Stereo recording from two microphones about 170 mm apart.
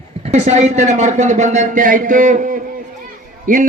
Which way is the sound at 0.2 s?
40° right (ahead or behind).